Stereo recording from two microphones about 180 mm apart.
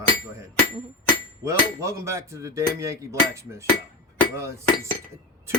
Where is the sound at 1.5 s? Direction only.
15° right (ahead or behind).